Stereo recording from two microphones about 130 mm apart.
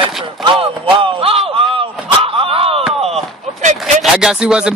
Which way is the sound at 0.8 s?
45° right (ahead or behind).